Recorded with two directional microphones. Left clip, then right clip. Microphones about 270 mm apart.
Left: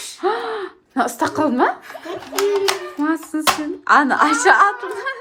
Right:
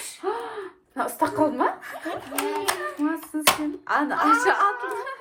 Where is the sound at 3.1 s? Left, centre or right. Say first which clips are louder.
Left 5 dB; left.